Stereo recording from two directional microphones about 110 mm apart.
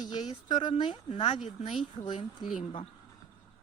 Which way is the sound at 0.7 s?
60° left (ahead or behind).